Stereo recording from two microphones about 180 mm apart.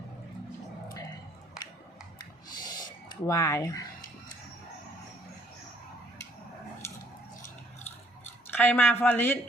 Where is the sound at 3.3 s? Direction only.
15° left (ahead or behind).